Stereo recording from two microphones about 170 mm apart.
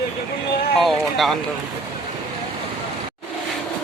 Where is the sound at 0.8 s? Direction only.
Centre (ahead or behind).